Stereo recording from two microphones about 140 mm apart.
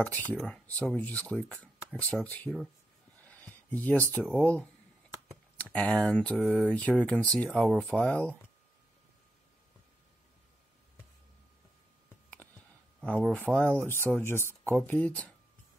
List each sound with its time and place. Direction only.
0.0 s speech: 10° left (ahead or behind)
3.3 s a sound: 10° left (ahead or behind)
4.1 s speech: 10° left (ahead or behind)
13.0 s speech: 5° left (ahead or behind)